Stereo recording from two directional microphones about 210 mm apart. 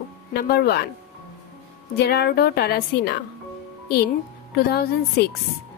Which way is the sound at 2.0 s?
50° left (ahead or behind).